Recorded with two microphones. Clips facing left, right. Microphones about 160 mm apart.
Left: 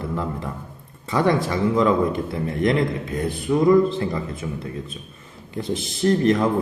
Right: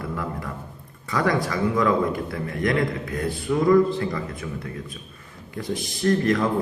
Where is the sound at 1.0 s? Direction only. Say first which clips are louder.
Left 3 dB; 25° left (ahead or behind).